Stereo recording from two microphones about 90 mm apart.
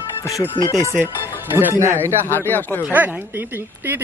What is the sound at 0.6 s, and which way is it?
Speech, 55° left (ahead or behind).